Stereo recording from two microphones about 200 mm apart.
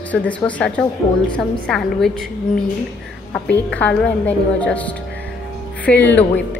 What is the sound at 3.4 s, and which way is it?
A woman's voice, 5° left (ahead or behind).